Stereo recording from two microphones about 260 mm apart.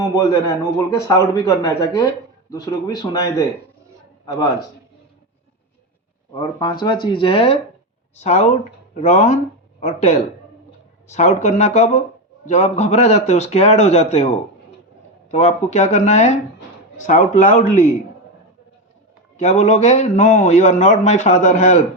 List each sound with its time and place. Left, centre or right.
0.0 s speech: centre
6.3 s a man's voice: centre
19.4 s a man's voice: left